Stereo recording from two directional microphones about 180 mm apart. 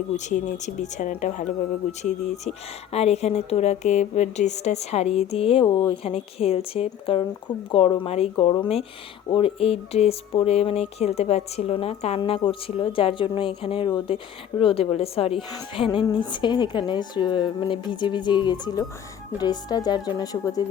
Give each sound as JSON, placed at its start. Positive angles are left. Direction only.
{"t": 0.2, "sound": "a woman's voice", "side_deg": 40}